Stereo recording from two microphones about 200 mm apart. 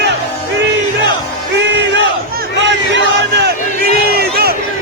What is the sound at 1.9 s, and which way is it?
Crowd, 55° right (ahead or behind).